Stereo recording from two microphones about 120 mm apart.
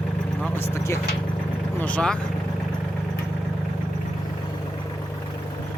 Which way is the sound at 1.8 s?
10° left (ahead or behind).